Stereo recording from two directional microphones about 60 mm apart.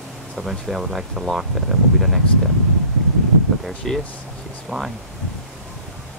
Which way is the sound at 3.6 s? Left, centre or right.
Centre.